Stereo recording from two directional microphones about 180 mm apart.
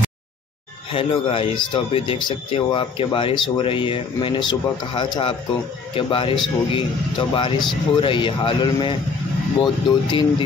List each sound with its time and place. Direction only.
0.9 s speech: 30° left (ahead or behind)